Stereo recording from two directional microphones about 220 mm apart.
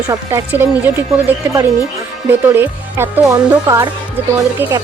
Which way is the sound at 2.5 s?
10° right (ahead or behind).